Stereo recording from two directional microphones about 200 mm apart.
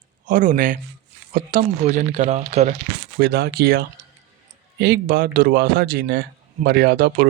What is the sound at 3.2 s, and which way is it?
Speech, 50° right (ahead or behind).